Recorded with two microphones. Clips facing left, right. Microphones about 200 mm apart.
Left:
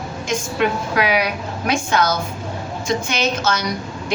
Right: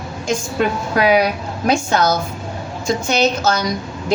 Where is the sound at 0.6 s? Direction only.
35° right (ahead or behind).